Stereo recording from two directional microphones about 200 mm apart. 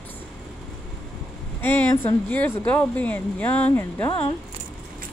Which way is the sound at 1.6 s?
10° left (ahead or behind).